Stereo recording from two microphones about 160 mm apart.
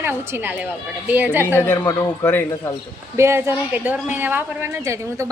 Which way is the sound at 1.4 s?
15° left (ahead or behind).